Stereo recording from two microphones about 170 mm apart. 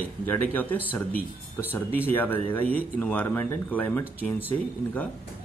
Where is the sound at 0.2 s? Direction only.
10° left (ahead or behind).